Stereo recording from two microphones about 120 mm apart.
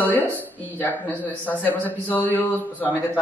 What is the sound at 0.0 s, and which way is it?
A woman's voice, 15° left (ahead or behind).